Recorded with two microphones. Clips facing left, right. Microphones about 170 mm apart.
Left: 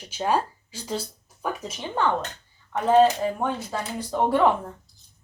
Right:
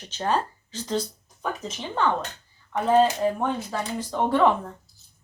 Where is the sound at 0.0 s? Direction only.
10° left (ahead or behind).